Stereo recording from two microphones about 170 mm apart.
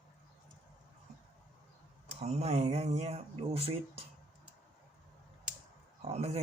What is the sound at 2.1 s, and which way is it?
Speech, 40° right (ahead or behind).